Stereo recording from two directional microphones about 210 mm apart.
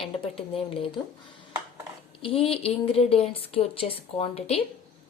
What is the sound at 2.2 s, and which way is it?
A woman's voice, 25° left (ahead or behind).